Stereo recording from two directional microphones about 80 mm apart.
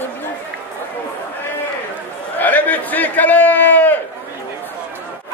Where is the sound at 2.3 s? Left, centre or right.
Left.